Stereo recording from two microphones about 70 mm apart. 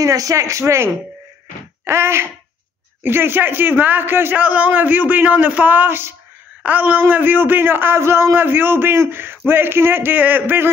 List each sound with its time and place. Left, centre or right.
0.0 s speech: right
1.9 s a man's voice: right